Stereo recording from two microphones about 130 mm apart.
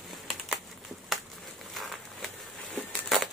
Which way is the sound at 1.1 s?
Centre (ahead or behind).